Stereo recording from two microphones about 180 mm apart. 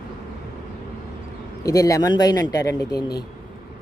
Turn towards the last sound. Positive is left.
turn(degrees=20)  # may be behind; listen again after turning